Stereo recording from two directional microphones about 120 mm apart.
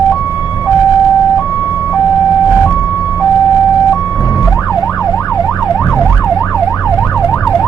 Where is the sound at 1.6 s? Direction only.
15° right (ahead or behind).